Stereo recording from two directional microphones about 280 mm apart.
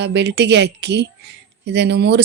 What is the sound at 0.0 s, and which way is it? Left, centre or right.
Speech, right.